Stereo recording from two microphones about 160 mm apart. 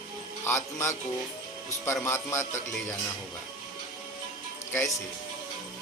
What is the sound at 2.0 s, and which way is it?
Speech, 15° left (ahead or behind).